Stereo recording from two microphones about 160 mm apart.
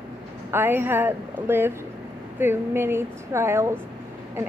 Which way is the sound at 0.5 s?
15° right (ahead or behind).